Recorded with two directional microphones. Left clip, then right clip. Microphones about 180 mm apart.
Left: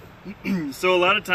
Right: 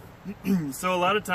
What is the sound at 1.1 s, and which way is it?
Speech, 30° right (ahead or behind).